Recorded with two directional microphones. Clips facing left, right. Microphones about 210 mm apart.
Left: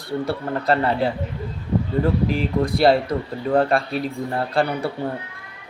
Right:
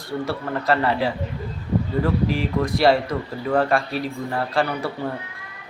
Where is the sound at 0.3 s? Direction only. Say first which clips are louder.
Left 1 dB; 30° left (ahead or behind).